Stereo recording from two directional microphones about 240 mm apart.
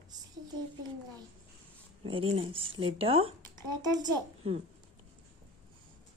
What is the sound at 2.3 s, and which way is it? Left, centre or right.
A child's voice, right.